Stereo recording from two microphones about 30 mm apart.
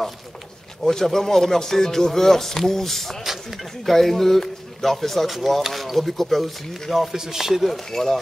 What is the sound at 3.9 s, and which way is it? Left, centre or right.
Speech, centre.